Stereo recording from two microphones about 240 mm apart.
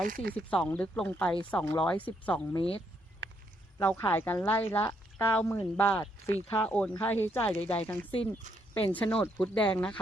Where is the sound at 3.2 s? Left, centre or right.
Right.